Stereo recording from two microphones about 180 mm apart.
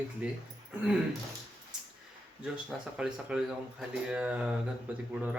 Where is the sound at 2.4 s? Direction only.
5° right (ahead or behind).